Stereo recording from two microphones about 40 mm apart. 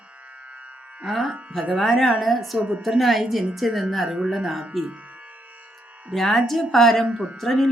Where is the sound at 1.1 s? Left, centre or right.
Centre.